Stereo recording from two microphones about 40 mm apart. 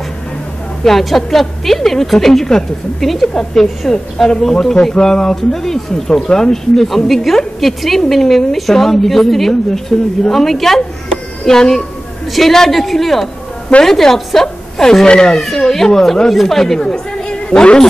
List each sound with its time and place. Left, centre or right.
0.8 s a woman's voice: centre; by 15.3 s left
15.3 s a woman's voice: centre; by 17.7 s left